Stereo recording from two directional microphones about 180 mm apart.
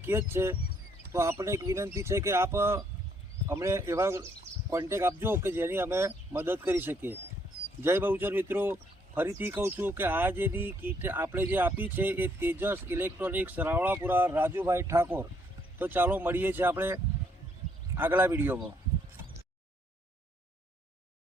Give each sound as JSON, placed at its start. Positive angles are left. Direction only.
{"t": 0.0, "sound": "speech", "side_deg": -15}